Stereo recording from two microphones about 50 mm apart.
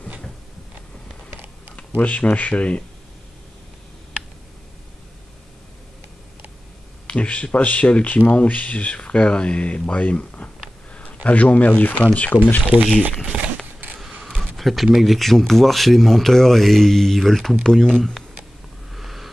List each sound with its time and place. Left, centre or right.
2.0 s speech: left
7.1 s speech: left
12.7 s speech: right
13.3 s a sound: right
14.3 s speech: centre
18.9 s a sound: centre